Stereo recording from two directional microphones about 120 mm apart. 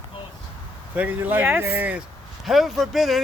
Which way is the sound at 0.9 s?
15° right (ahead or behind).